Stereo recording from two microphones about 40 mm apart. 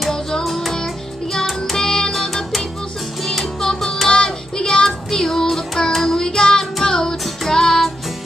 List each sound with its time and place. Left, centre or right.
0.4 s music: centre